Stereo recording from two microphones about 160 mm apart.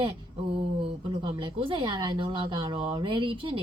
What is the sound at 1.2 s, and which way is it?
Speech, 30° right (ahead or behind).